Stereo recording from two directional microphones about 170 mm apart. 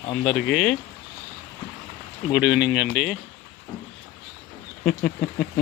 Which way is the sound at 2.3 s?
10° right (ahead or behind).